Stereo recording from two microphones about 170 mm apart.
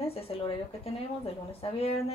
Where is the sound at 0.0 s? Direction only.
35° left (ahead or behind).